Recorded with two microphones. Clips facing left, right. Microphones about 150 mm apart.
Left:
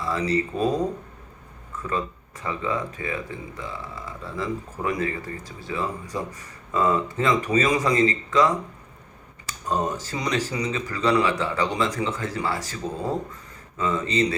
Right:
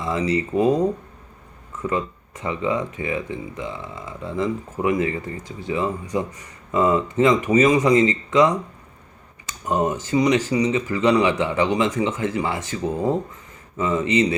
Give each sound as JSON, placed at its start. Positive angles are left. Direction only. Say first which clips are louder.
{"t": 0.0, "sound": "speech", "louder": "right 2 dB", "side_deg": -20}
{"t": 1.9, "sound": "speech", "louder": "right 3 dB", "side_deg": -20}
{"t": 9.6, "sound": "speech", "louder": "right 4 dB", "side_deg": -20}